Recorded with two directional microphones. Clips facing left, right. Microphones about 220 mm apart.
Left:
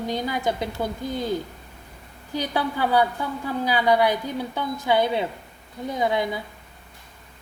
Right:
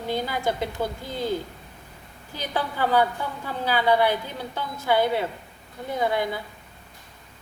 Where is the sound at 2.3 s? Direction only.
10° left (ahead or behind).